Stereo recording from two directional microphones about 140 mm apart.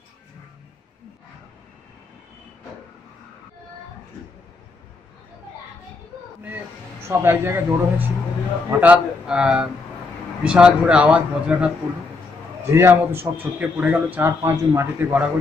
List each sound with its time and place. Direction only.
6.4 s a sound: 15° right (ahead or behind)
8.6 s a man's voice: 10° right (ahead or behind)
12.7 s a man's voice: 15° right (ahead or behind)